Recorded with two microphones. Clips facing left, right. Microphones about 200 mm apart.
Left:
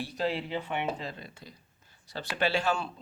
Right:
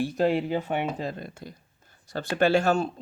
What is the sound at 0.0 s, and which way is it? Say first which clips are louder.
Speech: right 8 dB; 50° right (ahead or behind).